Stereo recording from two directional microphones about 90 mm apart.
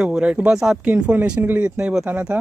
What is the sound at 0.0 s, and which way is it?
Speech, 10° right (ahead or behind).